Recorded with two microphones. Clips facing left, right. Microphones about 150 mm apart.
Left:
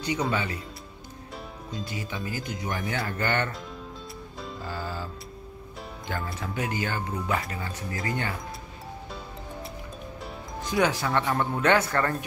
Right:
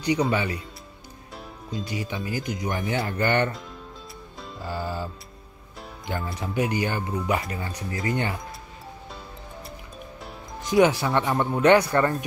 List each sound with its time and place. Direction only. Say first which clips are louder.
0.3 s speech: right 3 dB; 15° right (ahead or behind)
1.9 s speech: right 4 dB; 20° right (ahead or behind)
4.6 s music: right 5 dB; 15° right (ahead or behind)
6.0 s speech: right 3 dB; 20° right (ahead or behind)
10.6 s speech: right 6 dB; 20° right (ahead or behind)